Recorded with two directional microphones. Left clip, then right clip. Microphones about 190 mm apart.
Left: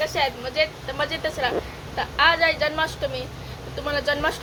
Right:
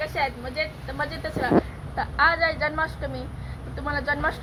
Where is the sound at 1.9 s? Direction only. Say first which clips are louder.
Left 2 dB; 30° left (ahead or behind).